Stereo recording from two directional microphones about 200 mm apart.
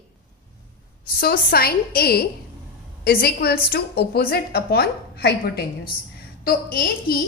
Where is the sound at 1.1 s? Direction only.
50° left (ahead or behind).